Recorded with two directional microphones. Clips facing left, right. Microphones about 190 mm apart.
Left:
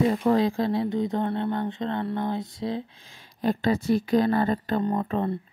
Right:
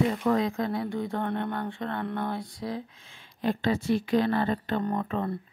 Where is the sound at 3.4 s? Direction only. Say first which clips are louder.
Left 3 dB; 40° left (ahead or behind).